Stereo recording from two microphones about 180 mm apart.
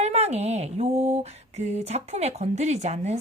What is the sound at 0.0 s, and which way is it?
Female singing, 35° right (ahead or behind).